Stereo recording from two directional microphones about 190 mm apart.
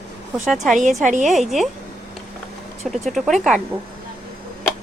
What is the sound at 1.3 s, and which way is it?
Speech, centre (ahead or behind).